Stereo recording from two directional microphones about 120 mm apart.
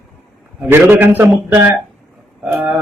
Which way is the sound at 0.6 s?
15° right (ahead or behind).